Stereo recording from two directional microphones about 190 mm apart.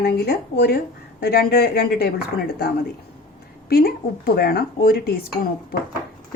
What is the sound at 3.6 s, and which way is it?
A woman's voice, 55° left (ahead or behind).